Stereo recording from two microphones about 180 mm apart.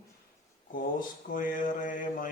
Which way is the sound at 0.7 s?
50° left (ahead or behind).